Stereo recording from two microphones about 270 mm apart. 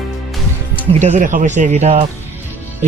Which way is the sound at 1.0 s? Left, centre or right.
Right.